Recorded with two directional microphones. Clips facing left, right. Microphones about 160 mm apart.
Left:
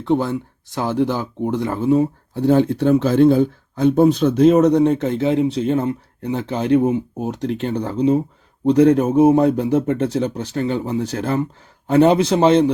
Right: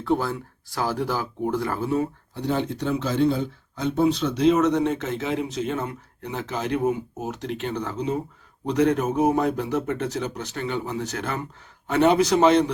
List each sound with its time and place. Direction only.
0.0 s speech: 20° left (ahead or behind)
2.3 s speech: 50° left (ahead or behind); by 12.7 s 30° left (ahead or behind)